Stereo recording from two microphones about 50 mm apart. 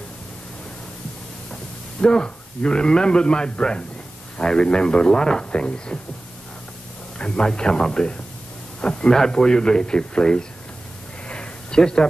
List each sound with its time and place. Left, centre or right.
1.5 s speech: centre
7.2 s speech: centre
11.2 s a sound: centre